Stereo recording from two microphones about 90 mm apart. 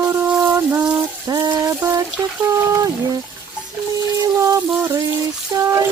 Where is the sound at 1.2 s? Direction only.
45° right (ahead or behind).